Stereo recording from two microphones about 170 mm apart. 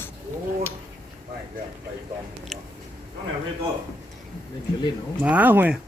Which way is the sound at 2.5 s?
Centre (ahead or behind).